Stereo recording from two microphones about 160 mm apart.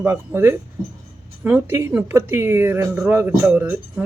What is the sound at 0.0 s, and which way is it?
Speech, 15° right (ahead or behind).